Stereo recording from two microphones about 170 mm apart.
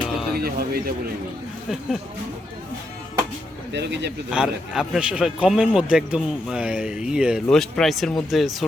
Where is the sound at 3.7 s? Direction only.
90° right.